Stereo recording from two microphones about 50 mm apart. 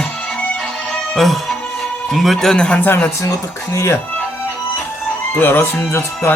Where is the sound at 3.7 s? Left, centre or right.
Left.